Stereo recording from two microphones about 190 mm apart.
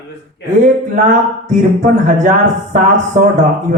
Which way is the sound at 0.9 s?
40° right (ahead or behind).